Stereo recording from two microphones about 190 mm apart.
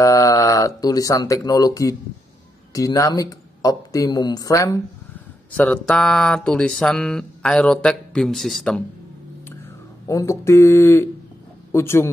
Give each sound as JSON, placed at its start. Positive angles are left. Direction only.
{"t": 0.0, "sound": "speech", "side_deg": 15}
{"t": 5.6, "sound": "speech", "side_deg": 5}
{"t": 10.0, "sound": "speech", "side_deg": 15}